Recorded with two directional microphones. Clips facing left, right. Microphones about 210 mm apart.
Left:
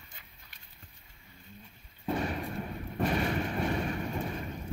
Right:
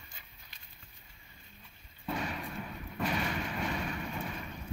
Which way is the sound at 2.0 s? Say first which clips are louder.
Left 5 dB; 40° left (ahead or behind).